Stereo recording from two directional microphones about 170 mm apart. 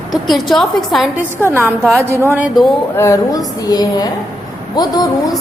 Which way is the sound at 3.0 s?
20° left (ahead or behind).